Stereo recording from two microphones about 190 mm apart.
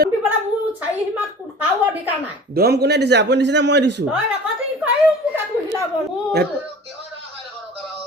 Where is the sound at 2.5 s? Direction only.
55° right (ahead or behind).